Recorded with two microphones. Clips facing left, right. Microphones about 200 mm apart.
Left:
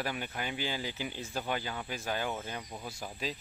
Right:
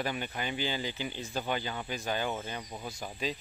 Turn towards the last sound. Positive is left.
turn(degrees=5)  # may be behind; listen again after turning